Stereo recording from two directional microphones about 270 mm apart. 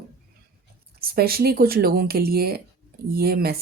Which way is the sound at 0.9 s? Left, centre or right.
Right.